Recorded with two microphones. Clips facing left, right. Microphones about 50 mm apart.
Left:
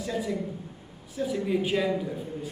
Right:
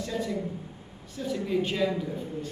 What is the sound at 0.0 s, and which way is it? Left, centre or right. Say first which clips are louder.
A woman's voice: left 1 dB; centre.